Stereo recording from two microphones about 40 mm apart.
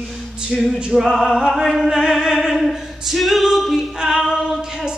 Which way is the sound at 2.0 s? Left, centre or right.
Centre.